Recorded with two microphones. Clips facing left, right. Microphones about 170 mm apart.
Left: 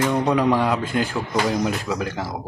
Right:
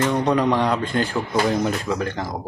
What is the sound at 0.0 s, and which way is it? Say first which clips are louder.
A man's voice: even; 10° left (ahead or behind).